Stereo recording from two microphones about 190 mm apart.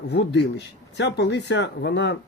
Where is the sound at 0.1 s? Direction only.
65° left (ahead or behind).